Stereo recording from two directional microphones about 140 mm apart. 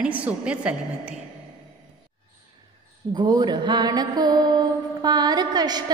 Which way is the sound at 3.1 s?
30° right (ahead or behind).